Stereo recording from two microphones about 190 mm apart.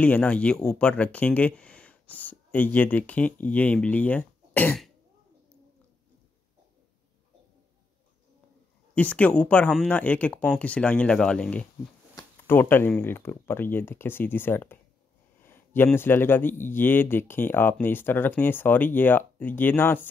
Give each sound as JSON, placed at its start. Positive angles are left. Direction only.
{"t": 0.0, "sound": "speech", "side_deg": 5}
{"t": 8.9, "sound": "speech", "side_deg": 5}